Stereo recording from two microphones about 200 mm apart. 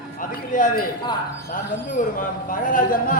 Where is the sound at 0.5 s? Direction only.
40° left (ahead or behind).